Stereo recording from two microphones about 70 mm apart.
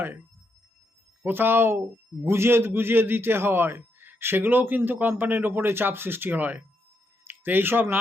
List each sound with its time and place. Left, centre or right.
1.2 s a man's voice: right